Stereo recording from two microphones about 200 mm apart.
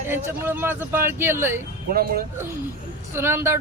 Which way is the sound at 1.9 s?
50° right (ahead or behind).